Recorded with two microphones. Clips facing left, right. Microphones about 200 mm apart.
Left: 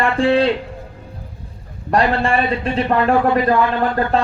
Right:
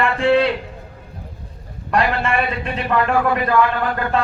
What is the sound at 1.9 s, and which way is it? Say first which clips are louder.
A man's voice: left 3 dB; 30° left (ahead or behind).